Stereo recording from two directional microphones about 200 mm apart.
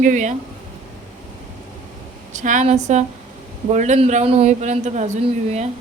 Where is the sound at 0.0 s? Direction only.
40° right (ahead or behind).